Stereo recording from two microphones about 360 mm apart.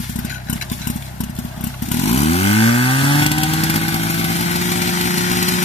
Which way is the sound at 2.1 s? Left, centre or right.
Centre.